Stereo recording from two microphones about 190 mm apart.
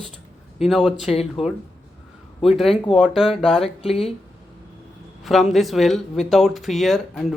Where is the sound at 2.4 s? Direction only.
Centre (ahead or behind).